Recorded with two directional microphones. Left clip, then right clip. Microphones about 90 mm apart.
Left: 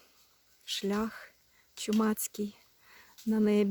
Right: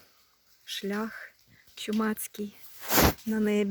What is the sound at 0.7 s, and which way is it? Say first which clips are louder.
Speech: even; 20° left (ahead or behind).